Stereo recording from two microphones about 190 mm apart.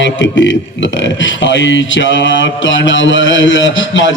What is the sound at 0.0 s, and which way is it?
A man's voice, 75° left (ahead or behind).